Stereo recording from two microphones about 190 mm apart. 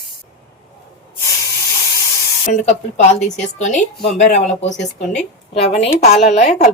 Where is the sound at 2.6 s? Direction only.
35° left (ahead or behind).